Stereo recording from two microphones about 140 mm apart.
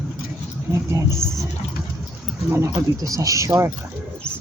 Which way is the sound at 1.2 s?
20° right (ahead or behind).